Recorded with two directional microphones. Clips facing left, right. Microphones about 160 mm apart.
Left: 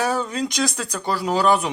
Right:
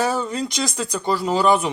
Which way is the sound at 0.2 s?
5° right (ahead or behind).